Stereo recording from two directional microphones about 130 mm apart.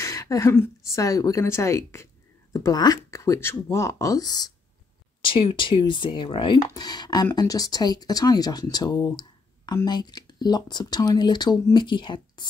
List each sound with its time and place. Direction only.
0.0 s a woman's voice: 25° left (ahead or behind)
5.2 s a woman's voice: 40° left (ahead or behind)